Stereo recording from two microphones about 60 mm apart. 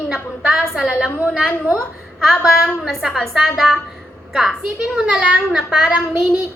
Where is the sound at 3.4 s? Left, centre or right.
Centre.